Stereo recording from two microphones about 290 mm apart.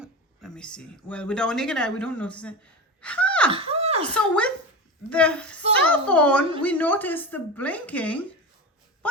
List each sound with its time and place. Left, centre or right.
0.0 s speech: centre
3.0 s gasp: centre
3.5 s a sound: centre
4.1 s speech: centre